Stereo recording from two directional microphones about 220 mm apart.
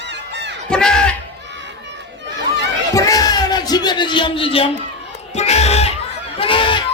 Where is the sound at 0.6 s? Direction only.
5° left (ahead or behind).